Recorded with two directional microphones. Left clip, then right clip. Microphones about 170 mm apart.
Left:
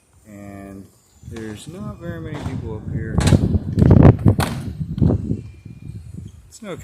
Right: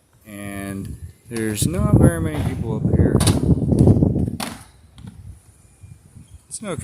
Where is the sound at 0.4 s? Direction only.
60° right (ahead or behind).